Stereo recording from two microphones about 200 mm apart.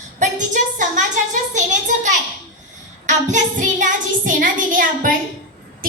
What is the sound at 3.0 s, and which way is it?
Child singing, 40° right (ahead or behind).